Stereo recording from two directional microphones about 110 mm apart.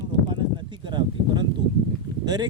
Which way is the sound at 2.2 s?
40° right (ahead or behind).